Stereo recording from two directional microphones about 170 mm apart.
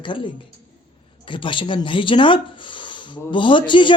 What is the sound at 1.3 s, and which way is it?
Speech, 30° left (ahead or behind).